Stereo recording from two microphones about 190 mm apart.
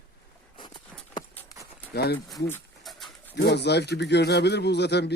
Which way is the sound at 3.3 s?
60° left (ahead or behind).